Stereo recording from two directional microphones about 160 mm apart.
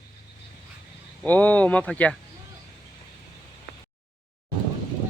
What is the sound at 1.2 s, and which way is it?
Speech, 10° left (ahead or behind).